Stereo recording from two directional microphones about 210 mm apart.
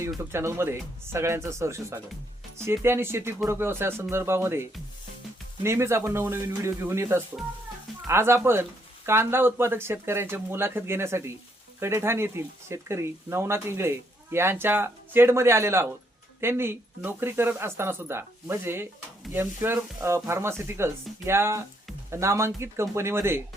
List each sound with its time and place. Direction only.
0.2 s speech: 10° right (ahead or behind)